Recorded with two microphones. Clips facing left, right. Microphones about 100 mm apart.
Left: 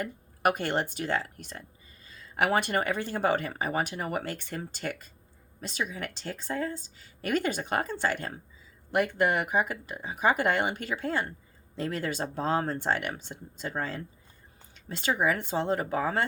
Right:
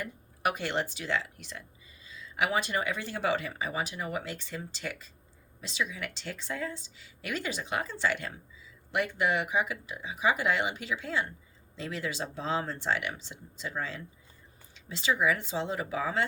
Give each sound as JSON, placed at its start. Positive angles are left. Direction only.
{"t": 0.0, "sound": "speech", "side_deg": 50}